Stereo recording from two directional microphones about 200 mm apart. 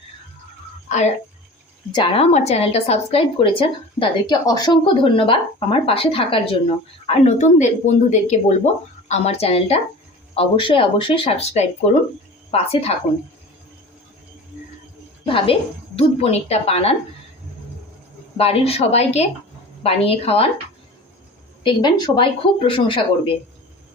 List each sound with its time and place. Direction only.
0.9 s speech: 35° left (ahead or behind)
1.9 s a woman's voice: 25° left (ahead or behind)
15.3 s a woman's voice: 25° left (ahead or behind)
18.3 s a woman's voice: 30° left (ahead or behind)
21.6 s a woman's voice: 25° left (ahead or behind)